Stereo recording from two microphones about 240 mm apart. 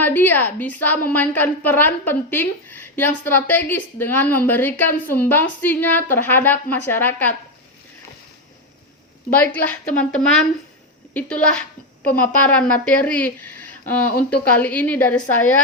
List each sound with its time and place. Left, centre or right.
0.0 s a woman's voice: centre
9.3 s a woman's voice: centre
13.4 s a sound: left
13.8 s a woman's voice: centre